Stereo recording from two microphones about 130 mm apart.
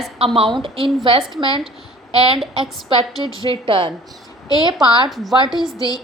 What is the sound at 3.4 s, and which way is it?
A woman's voice, 40° right (ahead or behind).